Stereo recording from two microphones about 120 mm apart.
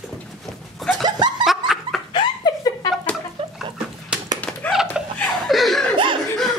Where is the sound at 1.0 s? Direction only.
35° right (ahead or behind).